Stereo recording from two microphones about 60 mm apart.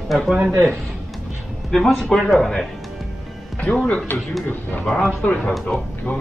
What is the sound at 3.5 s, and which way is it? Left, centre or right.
Speech, left.